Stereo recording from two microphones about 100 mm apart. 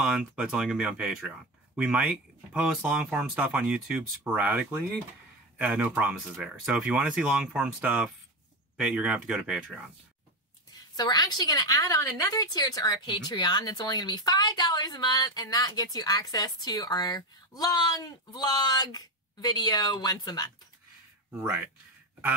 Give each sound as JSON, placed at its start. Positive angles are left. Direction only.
{"t": 0.0, "sound": "speech", "side_deg": -10}
{"t": 11.0, "sound": "a woman's voice", "side_deg": 40}